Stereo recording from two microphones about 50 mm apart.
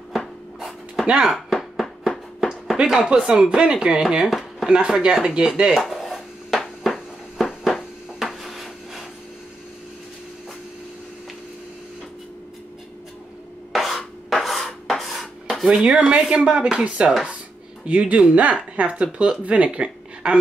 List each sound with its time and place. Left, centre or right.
0.1 s rub: centre
1.1 s speech: centre
1.5 s music: centre
2.8 s speech: centre
4.3 s a sound: centre
4.6 s speech: centre
5.8 s a sound: centre
13.7 s a sound: centre
15.7 s speech: centre